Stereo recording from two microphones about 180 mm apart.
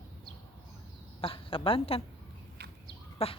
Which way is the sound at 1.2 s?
30° left (ahead or behind).